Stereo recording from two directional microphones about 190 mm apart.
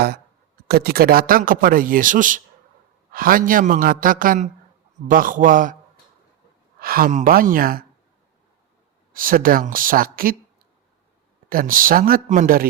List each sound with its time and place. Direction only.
0.7 s a man's voice: 55° right (ahead or behind)
6.7 s a man's voice: 50° right (ahead or behind)
9.1 s a man's voice: 45° right (ahead or behind)
11.4 s a man's voice: 45° right (ahead or behind)